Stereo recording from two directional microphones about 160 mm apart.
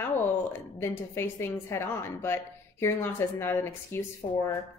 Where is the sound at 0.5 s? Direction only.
15° left (ahead or behind).